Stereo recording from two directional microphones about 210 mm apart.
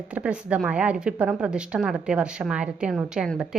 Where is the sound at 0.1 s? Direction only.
5° right (ahead or behind).